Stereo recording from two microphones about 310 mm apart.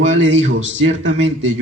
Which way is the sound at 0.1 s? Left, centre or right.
Right.